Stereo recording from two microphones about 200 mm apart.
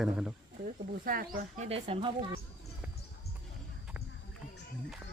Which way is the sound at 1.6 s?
30° right (ahead or behind).